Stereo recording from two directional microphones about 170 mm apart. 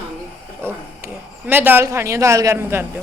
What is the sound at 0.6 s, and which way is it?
Speech, 10° right (ahead or behind).